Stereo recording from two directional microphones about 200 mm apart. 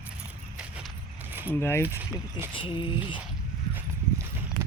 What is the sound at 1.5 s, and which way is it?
Speech, 10° left (ahead or behind).